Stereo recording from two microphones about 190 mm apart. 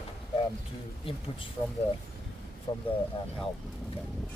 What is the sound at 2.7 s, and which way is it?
Speech, 25° left (ahead or behind).